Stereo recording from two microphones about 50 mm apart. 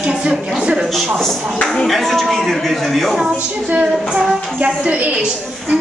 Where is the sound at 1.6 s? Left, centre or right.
Centre.